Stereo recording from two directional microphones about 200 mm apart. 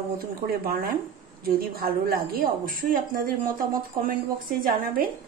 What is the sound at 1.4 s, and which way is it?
A woman's voice, 50° right (ahead or behind).